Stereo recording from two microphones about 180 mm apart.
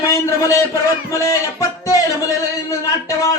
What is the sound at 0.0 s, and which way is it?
Speech, 15° left (ahead or behind).